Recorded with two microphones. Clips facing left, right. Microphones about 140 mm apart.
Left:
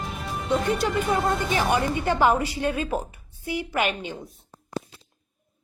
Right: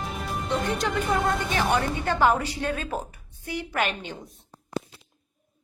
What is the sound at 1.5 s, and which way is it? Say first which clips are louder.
Speech: left 1 dB; 15° left (ahead or behind).